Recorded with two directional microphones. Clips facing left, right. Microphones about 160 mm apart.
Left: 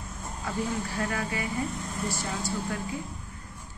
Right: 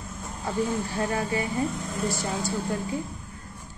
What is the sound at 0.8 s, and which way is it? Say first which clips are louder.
Speech: right 4 dB; 30° right (ahead or behind).